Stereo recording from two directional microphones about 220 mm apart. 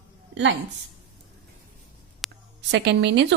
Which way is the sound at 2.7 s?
50° right (ahead or behind).